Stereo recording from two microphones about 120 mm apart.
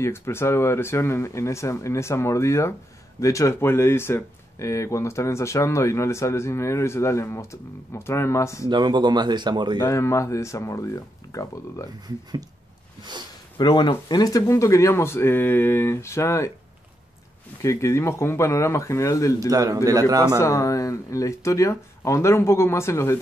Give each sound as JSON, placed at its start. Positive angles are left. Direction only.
{"t": 0.0, "sound": "speech", "side_deg": 20}
{"t": 8.6, "sound": "speech", "side_deg": -35}
{"t": 9.8, "sound": "speech", "side_deg": 25}
{"t": 13.6, "sound": "speech", "side_deg": 40}
{"t": 17.6, "sound": "speech", "side_deg": 25}
{"t": 19.5, "sound": "a man's voice", "side_deg": -30}
{"t": 20.3, "sound": "speech", "side_deg": 25}